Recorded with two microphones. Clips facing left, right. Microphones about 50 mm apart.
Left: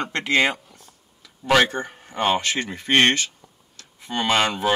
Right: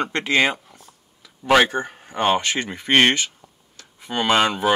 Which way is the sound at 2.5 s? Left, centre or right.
Right.